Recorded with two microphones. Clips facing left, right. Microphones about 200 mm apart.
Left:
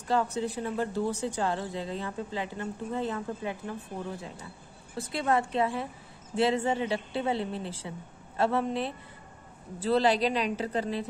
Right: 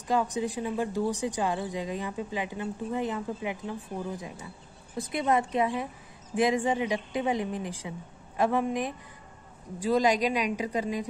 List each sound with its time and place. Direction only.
0.1 s speech: 15° right (ahead or behind)